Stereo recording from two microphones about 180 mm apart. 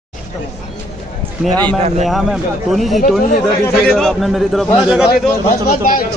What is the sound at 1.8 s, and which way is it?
Speech, 40° right (ahead or behind).